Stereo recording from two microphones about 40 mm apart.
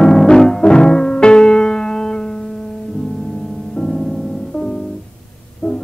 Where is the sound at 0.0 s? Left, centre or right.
Centre.